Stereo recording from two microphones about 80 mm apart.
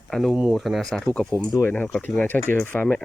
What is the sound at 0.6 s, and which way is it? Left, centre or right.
Speech, centre.